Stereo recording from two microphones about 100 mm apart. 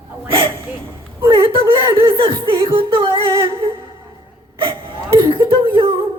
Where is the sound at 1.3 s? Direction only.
60° right (ahead or behind).